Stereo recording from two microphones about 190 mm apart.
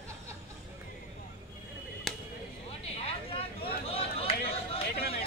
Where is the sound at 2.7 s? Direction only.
30° left (ahead or behind).